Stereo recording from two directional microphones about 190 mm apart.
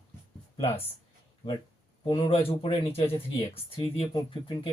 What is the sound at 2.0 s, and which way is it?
Speech, 30° left (ahead or behind).